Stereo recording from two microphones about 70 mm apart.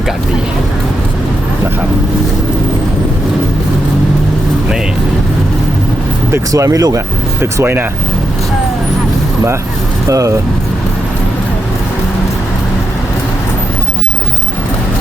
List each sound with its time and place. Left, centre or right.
6.5 s speech: right
7.4 s speech: right
10.1 s speech: right